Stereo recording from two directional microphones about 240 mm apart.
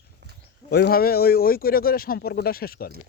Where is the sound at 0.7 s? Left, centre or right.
Left.